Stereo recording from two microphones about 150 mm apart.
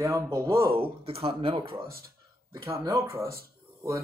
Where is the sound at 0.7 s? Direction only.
40° right (ahead or behind).